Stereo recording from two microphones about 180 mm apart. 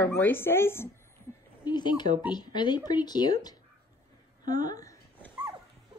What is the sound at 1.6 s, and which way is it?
Speech, 25° left (ahead or behind).